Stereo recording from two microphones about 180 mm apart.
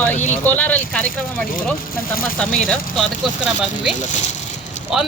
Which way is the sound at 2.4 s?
5° left (ahead or behind).